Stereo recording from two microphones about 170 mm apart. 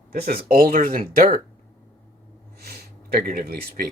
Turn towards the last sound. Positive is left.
turn(degrees=-60)  # may be behind; listen again after turning